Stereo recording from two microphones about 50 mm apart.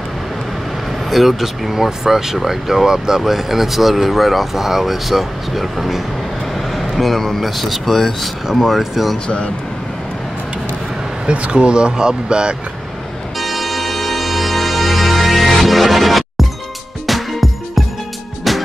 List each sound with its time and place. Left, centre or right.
1.1 s speech: centre
11.2 s speech: right
13.4 s music: centre